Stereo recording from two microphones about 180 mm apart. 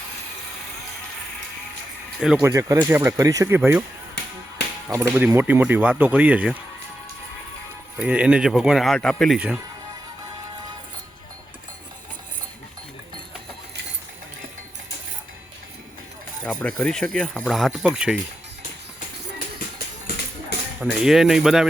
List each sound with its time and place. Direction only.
2.4 s speech: 15° right (ahead or behind)
4.9 s speech: 15° right (ahead or behind)
7.9 s speech: 5° right (ahead or behind)
16.4 s speech: 5° left (ahead or behind)
20.1 s music: 60° left (ahead or behind)
20.9 s speech: centre (ahead or behind)